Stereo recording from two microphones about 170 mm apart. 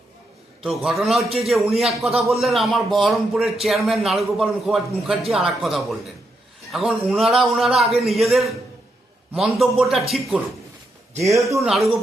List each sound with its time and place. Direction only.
0.6 s speech: centre (ahead or behind)
11.2 s a man's voice: 15° right (ahead or behind)
11.6 s speech: centre (ahead or behind)